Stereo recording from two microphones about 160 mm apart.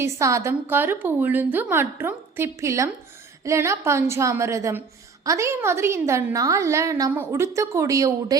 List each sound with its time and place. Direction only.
0.0 s a woman's voice: 20° right (ahead or behind)